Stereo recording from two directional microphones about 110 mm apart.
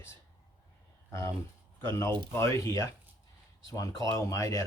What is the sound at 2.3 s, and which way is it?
Speech, 25° left (ahead or behind).